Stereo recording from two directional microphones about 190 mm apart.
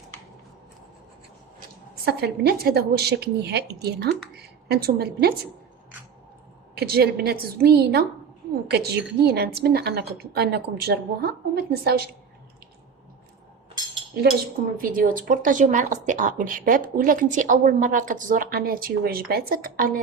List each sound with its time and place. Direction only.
2.0 s a woman's voice: 55° right (ahead or behind)
6.7 s a woman's voice: 55° right (ahead or behind)
14.2 s a woman's voice: 55° right (ahead or behind)